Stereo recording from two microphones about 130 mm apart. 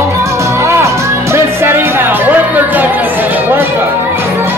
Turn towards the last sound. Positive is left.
turn(degrees=-15)  # may be behind; listen again after turning